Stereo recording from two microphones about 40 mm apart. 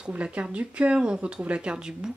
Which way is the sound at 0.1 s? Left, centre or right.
Right.